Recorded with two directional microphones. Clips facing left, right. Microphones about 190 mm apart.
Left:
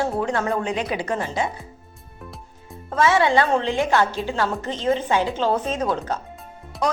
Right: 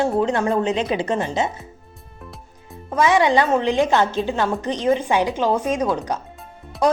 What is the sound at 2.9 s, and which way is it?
A woman's voice, 15° right (ahead or behind).